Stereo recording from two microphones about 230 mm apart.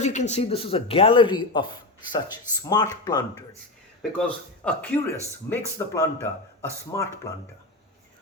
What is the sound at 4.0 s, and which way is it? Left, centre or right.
Speech, centre.